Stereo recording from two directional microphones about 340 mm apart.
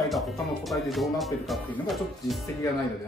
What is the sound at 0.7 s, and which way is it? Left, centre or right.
Speech, centre.